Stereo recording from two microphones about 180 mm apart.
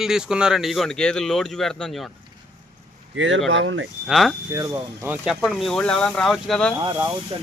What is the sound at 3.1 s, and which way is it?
Speech, 90° right.